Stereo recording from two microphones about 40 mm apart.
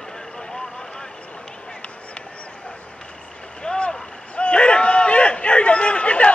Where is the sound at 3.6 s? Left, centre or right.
Left.